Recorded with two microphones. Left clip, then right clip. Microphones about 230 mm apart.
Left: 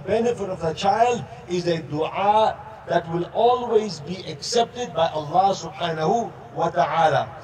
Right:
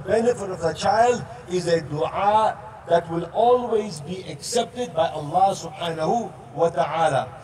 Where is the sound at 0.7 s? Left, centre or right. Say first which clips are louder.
Even; left.